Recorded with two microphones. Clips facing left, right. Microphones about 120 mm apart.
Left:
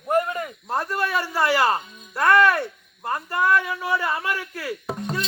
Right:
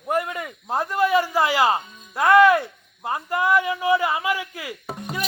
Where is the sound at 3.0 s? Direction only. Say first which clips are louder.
Even; 15° right (ahead or behind).